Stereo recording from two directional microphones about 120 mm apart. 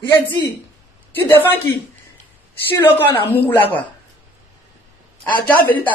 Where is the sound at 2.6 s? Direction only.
15° left (ahead or behind).